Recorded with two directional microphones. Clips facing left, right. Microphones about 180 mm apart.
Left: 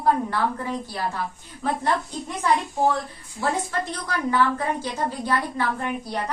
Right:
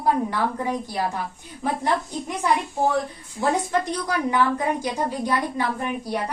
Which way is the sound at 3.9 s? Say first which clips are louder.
Right 2 dB; 15° right (ahead or behind).